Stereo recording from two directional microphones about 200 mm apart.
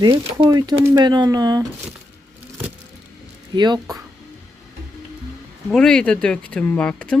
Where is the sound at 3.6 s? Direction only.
20° right (ahead or behind).